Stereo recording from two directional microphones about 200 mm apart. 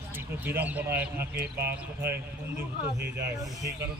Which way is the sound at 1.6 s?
10° right (ahead or behind).